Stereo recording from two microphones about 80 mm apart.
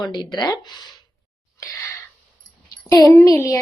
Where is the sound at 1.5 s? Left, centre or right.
Left.